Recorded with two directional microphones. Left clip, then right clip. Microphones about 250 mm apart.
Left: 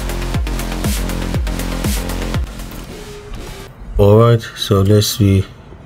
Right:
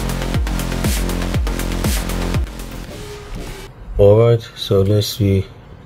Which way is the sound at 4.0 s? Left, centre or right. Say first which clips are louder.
Even; left.